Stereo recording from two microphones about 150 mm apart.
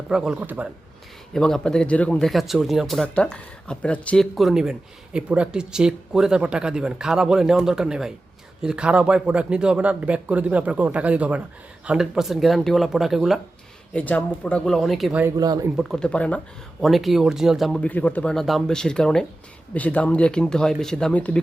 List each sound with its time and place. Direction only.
0.1 s speech: 5° right (ahead or behind)
1.3 s speech: 5° left (ahead or behind)
13.9 s speech: 10° left (ahead or behind)
15.4 s speech: 25° right (ahead or behind)
15.7 s speech: centre (ahead or behind)